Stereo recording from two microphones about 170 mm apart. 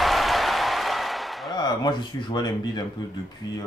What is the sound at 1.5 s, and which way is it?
Speech, 25° left (ahead or behind).